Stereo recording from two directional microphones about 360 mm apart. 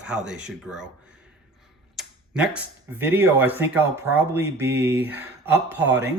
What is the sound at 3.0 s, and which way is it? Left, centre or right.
Speech, centre.